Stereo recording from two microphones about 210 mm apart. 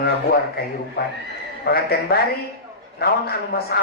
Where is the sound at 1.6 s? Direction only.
50° left (ahead or behind).